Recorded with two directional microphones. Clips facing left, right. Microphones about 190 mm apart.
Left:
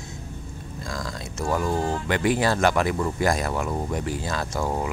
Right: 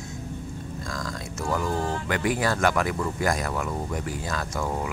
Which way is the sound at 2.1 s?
25° left (ahead or behind).